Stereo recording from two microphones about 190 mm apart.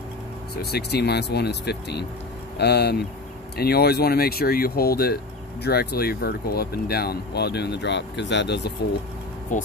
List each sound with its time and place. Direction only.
0.6 s speech: 60° left (ahead or behind)
9.5 s speech: 45° left (ahead or behind)